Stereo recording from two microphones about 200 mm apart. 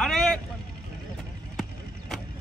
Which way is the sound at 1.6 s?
Centre (ahead or behind).